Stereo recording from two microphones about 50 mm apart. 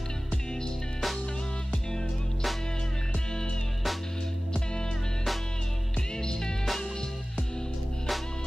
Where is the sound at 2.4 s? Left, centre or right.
Centre.